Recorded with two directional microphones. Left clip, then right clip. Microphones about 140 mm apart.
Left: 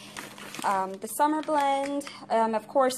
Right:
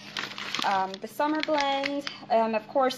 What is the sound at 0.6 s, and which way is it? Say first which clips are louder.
Speech: right 1 dB; 35° left (ahead or behind).